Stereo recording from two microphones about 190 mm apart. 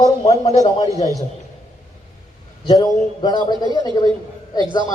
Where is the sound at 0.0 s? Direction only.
35° left (ahead or behind).